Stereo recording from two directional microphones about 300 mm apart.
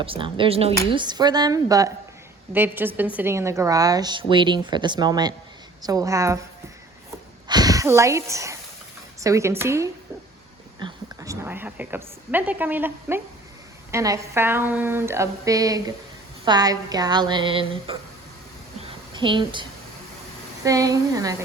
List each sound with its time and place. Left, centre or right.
0.0 s speech: centre
7.4 s a woman's voice: centre
18.8 s a sound: centre
20.7 s speech: centre